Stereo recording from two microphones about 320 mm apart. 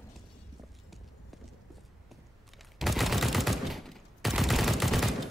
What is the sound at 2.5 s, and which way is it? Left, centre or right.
Fusillade, centre.